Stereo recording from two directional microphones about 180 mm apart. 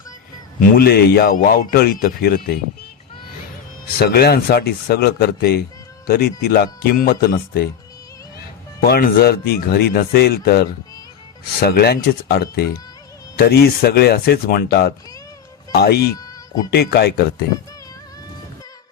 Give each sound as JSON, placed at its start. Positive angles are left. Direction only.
{"t": 0.6, "sound": "speech", "side_deg": 60}
{"t": 3.9, "sound": "speech", "side_deg": 60}
{"t": 8.8, "sound": "speech", "side_deg": 55}
{"t": 16.1, "sound": "music", "side_deg": 20}
{"t": 16.7, "sound": "speech", "side_deg": 65}